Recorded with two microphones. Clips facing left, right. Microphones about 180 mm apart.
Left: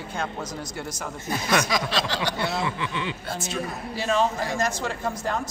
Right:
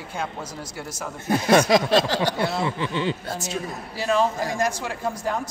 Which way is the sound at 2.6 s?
35° right (ahead or behind).